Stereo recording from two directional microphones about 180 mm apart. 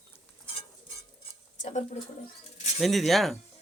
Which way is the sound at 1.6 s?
40° left (ahead or behind).